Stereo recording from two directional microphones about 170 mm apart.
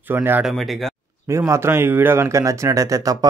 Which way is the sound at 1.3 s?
15° right (ahead or behind).